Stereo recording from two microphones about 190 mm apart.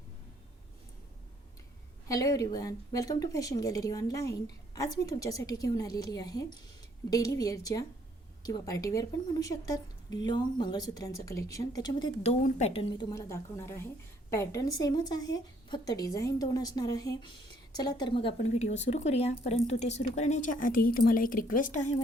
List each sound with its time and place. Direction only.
2.0 s a woman's voice: 20° left (ahead or behind)
12.3 s speech: 35° left (ahead or behind)